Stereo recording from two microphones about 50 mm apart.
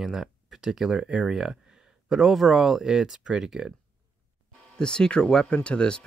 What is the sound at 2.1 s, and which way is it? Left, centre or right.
Speech, centre.